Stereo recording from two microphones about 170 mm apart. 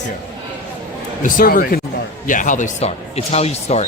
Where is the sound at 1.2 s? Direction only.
55° left (ahead or behind); by 3.8 s 40° left (ahead or behind).